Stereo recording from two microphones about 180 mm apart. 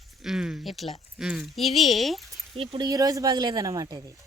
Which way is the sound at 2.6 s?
25° right (ahead or behind).